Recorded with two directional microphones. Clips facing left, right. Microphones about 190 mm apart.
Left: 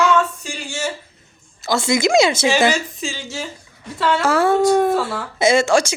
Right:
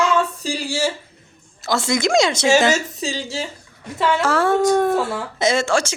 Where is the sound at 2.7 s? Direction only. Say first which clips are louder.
Right 1 dB; 40° right (ahead or behind).